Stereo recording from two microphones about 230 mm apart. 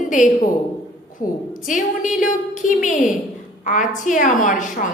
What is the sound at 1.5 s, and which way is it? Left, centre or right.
A woman's voice, left.